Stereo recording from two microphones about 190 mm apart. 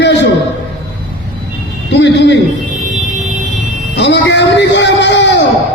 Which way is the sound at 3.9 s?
65° left (ahead or behind).